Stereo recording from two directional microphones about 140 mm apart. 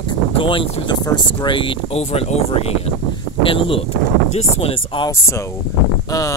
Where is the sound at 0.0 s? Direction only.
40° left (ahead or behind).